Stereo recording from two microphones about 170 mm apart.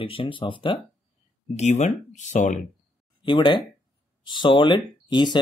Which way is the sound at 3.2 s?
30° left (ahead or behind).